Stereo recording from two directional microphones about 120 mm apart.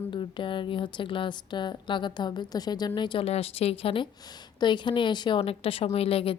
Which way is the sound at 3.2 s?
55° left (ahead or behind).